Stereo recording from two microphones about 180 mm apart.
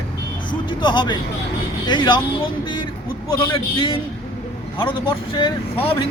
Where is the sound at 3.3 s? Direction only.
30° left (ahead or behind).